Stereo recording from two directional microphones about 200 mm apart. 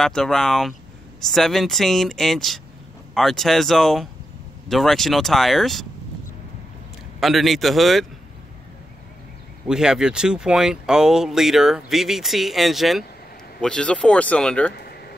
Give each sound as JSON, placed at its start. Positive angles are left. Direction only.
{"t": 0.0, "sound": "speech", "side_deg": 0}
{"t": 7.2, "sound": "speech", "side_deg": 0}
{"t": 9.7, "sound": "speech", "side_deg": -5}
{"t": 14.8, "sound": "a sound", "side_deg": 50}